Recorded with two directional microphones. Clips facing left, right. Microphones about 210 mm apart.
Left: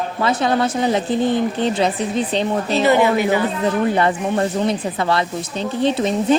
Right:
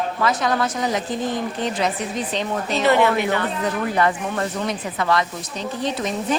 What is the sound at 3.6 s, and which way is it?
Speech, 30° left (ahead or behind).